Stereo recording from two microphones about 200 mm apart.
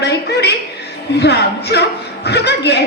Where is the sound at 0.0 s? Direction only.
55° left (ahead or behind).